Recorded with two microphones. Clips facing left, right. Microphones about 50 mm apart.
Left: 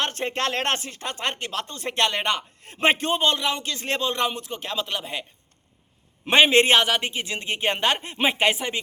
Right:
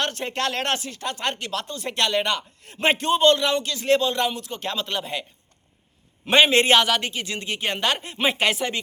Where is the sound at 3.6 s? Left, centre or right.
Left.